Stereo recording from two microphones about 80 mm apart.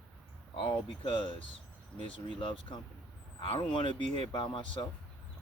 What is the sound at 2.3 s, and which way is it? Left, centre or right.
Speech, left.